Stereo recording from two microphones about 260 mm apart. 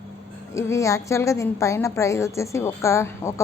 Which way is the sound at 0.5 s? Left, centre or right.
Centre.